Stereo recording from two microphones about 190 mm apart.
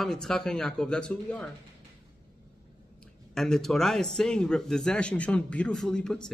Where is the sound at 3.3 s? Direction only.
Centre (ahead or behind).